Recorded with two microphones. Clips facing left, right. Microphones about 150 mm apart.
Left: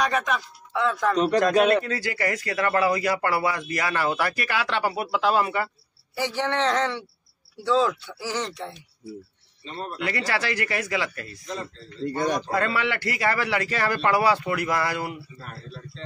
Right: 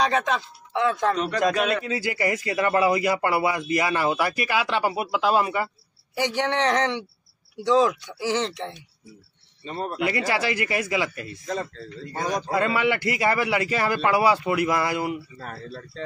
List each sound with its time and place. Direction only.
0.0 s speech: 25° right (ahead or behind)
1.1 s a man's voice: 40° left (ahead or behind)
1.9 s a man's voice: 15° right (ahead or behind)
9.7 s speech: 50° right (ahead or behind)
10.0 s a man's voice: 15° right (ahead or behind)
12.5 s a man's voice: 15° right (ahead or behind)
15.4 s speech: 45° right (ahead or behind)